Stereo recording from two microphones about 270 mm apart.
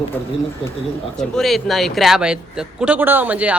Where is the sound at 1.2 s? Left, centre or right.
Centre.